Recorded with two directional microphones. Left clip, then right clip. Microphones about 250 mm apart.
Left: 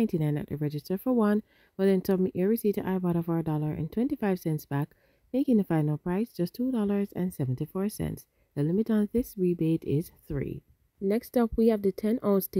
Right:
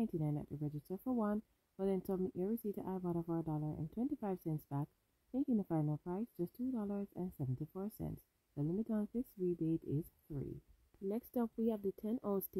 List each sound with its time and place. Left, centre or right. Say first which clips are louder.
0.0 s speech: left 12 dB; left